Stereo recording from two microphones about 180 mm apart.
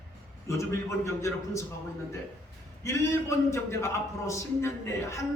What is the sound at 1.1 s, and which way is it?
Speech, 15° left (ahead or behind).